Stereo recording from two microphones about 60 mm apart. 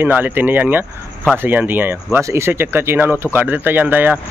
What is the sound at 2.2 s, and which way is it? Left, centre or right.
Speech, right.